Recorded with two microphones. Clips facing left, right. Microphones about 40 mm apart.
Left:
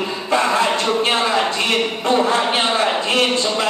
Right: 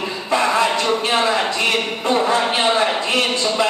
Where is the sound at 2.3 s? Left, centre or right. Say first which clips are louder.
Even; left.